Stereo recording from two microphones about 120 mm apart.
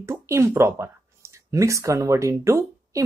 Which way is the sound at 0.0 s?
20° right (ahead or behind).